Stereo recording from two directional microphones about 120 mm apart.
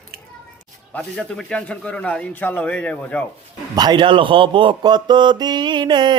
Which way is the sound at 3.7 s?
35° right (ahead or behind).